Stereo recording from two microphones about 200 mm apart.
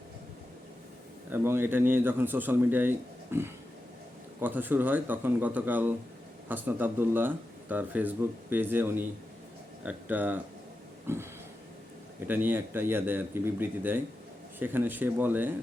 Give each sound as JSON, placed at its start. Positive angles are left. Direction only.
{"t": 1.3, "sound": "speech", "side_deg": -10}
{"t": 11.0, "sound": "a sound", "side_deg": -10}
{"t": 12.3, "sound": "speech", "side_deg": -10}